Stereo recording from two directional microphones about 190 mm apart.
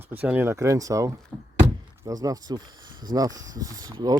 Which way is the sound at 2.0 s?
15° right (ahead or behind).